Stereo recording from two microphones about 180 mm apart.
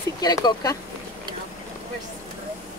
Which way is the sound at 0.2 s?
20° left (ahead or behind).